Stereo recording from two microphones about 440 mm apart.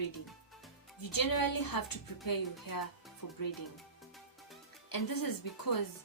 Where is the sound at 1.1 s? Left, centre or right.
Left.